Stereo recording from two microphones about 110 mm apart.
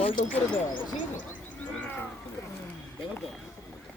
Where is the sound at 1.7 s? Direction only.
15° left (ahead or behind).